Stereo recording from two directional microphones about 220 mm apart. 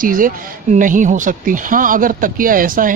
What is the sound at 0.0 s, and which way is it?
Speech, 40° right (ahead or behind).